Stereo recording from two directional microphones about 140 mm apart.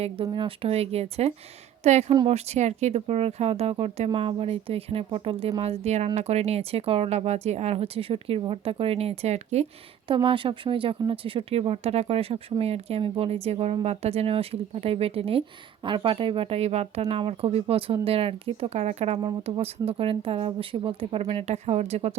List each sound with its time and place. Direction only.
0.0 s speech: 40° right (ahead or behind)
10.1 s speech: 35° right (ahead or behind)